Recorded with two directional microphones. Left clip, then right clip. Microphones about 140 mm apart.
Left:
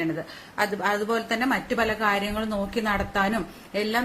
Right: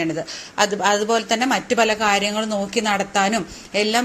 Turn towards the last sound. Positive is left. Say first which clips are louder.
# right 7 dB
turn(degrees=-20)  # may be behind; listen again after turning